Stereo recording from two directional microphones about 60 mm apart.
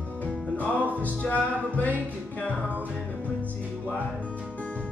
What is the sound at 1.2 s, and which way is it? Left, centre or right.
Music, left.